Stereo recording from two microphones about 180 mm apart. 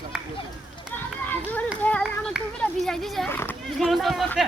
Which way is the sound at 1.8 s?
5° left (ahead or behind).